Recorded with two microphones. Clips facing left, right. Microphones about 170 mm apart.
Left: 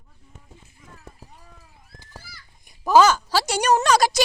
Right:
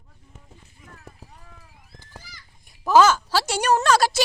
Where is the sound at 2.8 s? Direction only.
15° left (ahead or behind).